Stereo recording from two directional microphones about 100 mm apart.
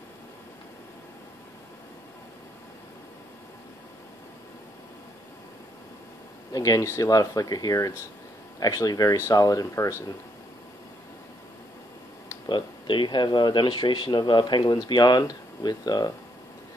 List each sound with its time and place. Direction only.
6.5 s speech: 35° left (ahead or behind)
12.4 s speech: 50° left (ahead or behind)